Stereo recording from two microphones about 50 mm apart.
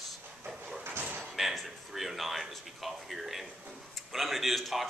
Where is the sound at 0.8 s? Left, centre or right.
Right.